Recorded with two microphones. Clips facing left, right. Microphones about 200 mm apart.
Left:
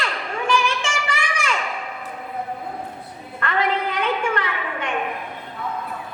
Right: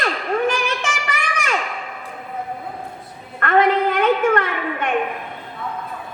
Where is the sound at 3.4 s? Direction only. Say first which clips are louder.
Right 6 dB; 50° right (ahead or behind).